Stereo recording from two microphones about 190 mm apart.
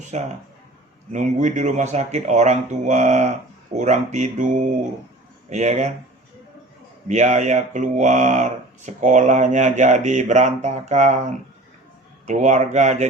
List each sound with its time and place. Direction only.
0.0 s speech: 40° right (ahead or behind)
7.1 s speech: 35° right (ahead or behind)